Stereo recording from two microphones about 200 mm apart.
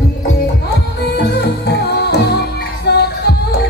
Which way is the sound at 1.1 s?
55° left (ahead or behind).